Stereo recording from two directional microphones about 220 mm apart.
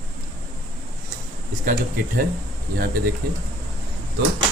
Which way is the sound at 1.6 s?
40° right (ahead or behind).